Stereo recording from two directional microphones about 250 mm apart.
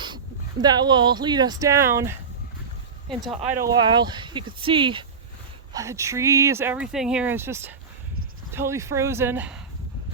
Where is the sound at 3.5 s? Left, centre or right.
Centre.